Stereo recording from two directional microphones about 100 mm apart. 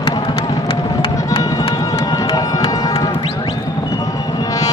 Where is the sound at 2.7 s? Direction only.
40° left (ahead or behind).